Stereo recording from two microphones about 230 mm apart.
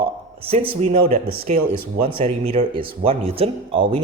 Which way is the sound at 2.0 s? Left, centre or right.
Right.